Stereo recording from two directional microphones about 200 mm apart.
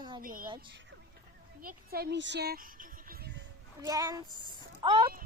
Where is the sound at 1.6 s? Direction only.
50° right (ahead or behind).